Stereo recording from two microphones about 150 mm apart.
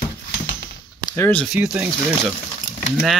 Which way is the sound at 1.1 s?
15° left (ahead or behind).